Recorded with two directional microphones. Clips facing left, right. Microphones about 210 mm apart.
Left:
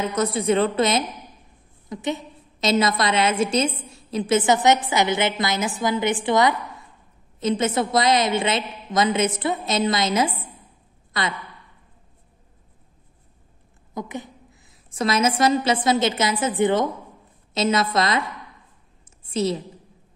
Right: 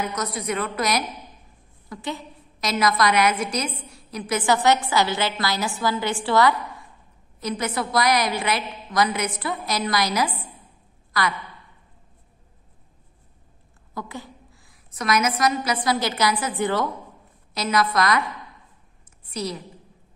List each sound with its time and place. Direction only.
0.0 s a woman's voice: 30° left (ahead or behind)
13.9 s a woman's voice: 20° left (ahead or behind)
19.2 s a woman's voice: 25° left (ahead or behind)